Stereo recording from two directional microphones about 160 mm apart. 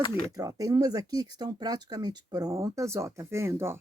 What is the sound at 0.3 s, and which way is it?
Speech, 20° right (ahead or behind).